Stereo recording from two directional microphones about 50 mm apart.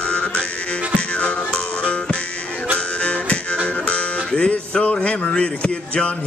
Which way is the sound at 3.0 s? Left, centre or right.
Left.